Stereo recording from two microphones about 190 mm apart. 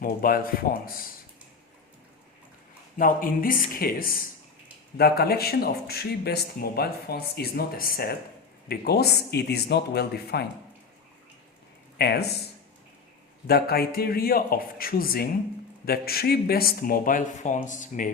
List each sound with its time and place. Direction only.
0.0 s speech: 50° left (ahead or behind)
3.0 s a man's voice: 45° left (ahead or behind)
11.9 s a man's voice: 60° left (ahead or behind)
13.5 s speech: 55° left (ahead or behind)